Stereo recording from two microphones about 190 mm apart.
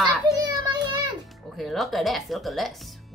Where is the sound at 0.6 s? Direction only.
25° right (ahead or behind).